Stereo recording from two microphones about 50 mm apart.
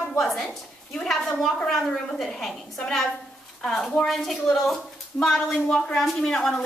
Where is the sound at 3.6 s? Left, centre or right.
Centre.